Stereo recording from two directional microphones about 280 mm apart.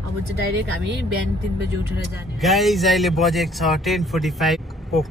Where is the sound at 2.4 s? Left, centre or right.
Centre.